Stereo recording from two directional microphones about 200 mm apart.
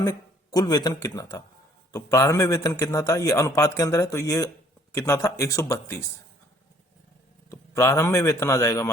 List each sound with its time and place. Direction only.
0.0 s a man's voice: 20° left (ahead or behind)
7.5 s a man's voice: 15° left (ahead or behind)